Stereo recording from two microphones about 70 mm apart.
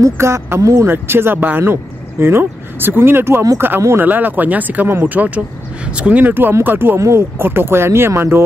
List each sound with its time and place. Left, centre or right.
0.0 s speech: right
0.8 s speech: right
7.0 s speech: right